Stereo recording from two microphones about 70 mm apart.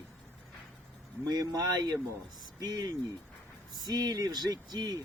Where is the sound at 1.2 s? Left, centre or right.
Right.